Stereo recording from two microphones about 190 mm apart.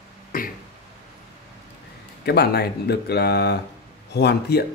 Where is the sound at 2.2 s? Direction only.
55° left (ahead or behind).